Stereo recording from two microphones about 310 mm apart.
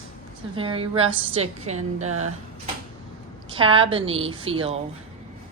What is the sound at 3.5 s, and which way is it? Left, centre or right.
A woman's voice, centre.